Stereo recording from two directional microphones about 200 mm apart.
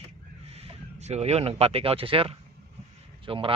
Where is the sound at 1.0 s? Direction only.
30° right (ahead or behind).